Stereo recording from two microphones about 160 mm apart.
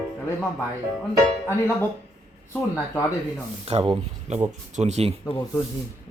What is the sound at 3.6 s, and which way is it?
A man's voice, 35° right (ahead or behind).